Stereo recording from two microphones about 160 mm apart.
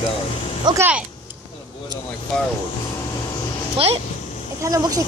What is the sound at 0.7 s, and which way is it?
Speech, 25° right (ahead or behind).